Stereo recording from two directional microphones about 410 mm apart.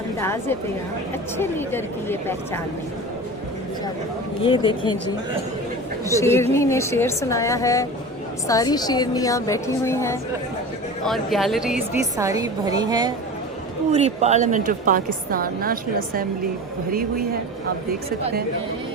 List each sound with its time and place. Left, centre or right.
0.2 s a woman's voice: centre
4.4 s a woman's voice: centre
6.1 s a woman's voice: centre; by 16.2 s right